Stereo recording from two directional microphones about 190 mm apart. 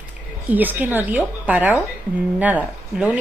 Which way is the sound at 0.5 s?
10° right (ahead or behind).